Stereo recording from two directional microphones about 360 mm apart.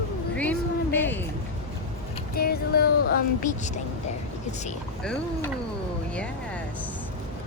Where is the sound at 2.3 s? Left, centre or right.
Left.